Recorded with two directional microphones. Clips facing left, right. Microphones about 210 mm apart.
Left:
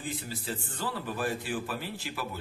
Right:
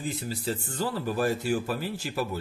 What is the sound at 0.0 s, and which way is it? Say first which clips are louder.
Speech: right 5 dB; 40° right (ahead or behind).